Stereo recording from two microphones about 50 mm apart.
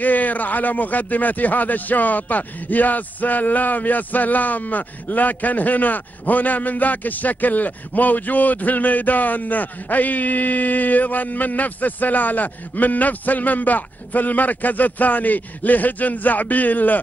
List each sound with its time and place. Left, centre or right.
0.0 s speech: left